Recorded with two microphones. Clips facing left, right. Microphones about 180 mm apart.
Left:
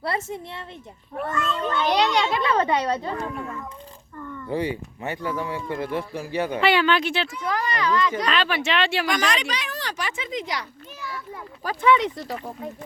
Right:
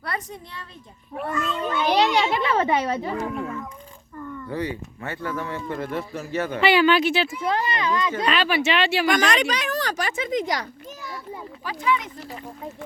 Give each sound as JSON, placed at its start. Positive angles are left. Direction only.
{"t": 0.0, "sound": "a woman's voice", "side_deg": 25}
{"t": 1.1, "sound": "speech", "side_deg": -5}
{"t": 2.0, "sound": "a child's voice", "side_deg": -20}
{"t": 4.4, "sound": "speech", "side_deg": 15}
{"t": 6.6, "sound": "speech", "side_deg": -5}
{"t": 7.4, "sound": "a child's voice", "side_deg": -25}
{"t": 8.3, "sound": "speech", "side_deg": -5}
{"t": 9.0, "sound": "speech", "side_deg": -50}
{"t": 11.6, "sound": "speech", "side_deg": 45}
{"t": 11.9, "sound": "speech", "side_deg": 70}